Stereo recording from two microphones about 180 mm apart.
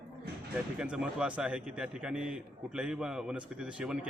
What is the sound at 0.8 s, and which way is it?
A man's voice, 5° right (ahead or behind).